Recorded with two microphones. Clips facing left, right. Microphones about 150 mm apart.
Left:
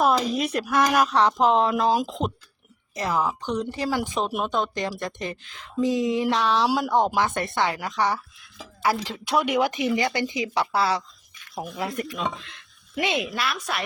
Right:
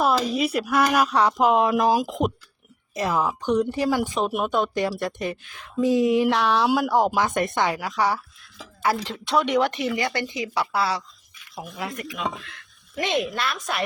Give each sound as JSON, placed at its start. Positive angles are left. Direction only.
{"t": 0.0, "sound": "a woman's voice", "side_deg": 0}
{"t": 7.3, "sound": "a woman's voice", "side_deg": -15}
{"t": 7.8, "sound": "a woman's voice", "side_deg": -5}
{"t": 9.8, "sound": "speech", "side_deg": 20}
{"t": 11.5, "sound": "speech", "side_deg": 40}
{"t": 12.4, "sound": "a sound", "side_deg": 20}
{"t": 13.1, "sound": "a woman's voice", "side_deg": 5}